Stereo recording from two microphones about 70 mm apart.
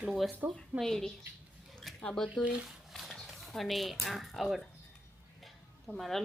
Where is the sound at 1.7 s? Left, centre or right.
Centre.